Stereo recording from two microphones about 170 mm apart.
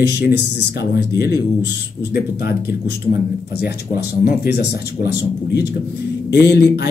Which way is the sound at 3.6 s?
65° left (ahead or behind).